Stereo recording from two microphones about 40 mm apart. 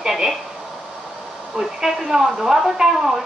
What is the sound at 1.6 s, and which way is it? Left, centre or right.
A woman's voice, centre.